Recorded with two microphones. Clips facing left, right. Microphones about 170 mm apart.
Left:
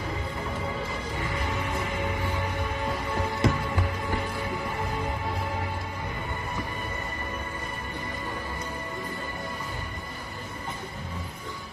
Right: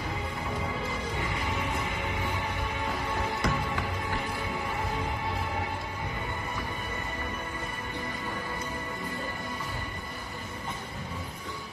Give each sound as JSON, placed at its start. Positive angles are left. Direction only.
{"t": 3.4, "sound": "music", "side_deg": 25}